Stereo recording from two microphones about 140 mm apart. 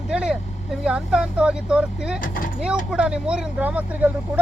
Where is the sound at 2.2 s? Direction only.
80° left.